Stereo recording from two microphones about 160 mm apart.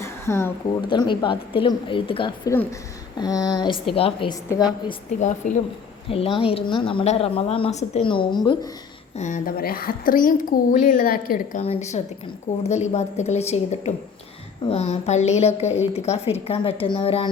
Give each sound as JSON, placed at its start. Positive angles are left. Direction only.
{"t": 0.0, "sound": "a sound", "side_deg": 15}
{"t": 0.9, "sound": "a woman's voice", "side_deg": 30}
{"t": 4.4, "sound": "a woman's voice", "side_deg": 25}
{"t": 5.4, "sound": "a woman's voice", "side_deg": 50}
{"t": 6.1, "sound": "a woman's voice", "side_deg": 35}
{"t": 8.0, "sound": "a woman's voice", "side_deg": 30}
{"t": 9.1, "sound": "a woman's voice", "side_deg": 50}
{"t": 11.6, "sound": "a woman's voice", "side_deg": 40}